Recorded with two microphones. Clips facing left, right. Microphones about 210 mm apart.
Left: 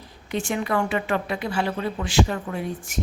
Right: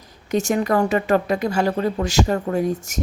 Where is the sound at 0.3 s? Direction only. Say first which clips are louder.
Right 6 dB; 40° right (ahead or behind).